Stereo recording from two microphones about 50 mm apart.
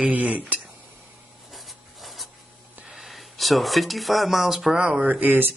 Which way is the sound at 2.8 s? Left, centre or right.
Centre.